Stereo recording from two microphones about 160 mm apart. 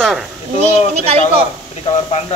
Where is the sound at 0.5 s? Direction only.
40° right (ahead or behind).